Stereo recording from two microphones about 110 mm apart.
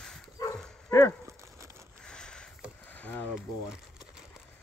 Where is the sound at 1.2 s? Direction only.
25° right (ahead or behind).